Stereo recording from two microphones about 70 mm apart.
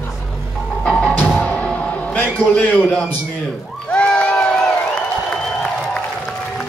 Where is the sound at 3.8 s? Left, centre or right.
Centre.